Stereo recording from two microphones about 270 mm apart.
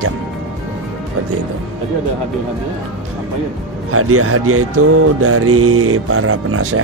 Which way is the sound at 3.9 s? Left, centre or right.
Right.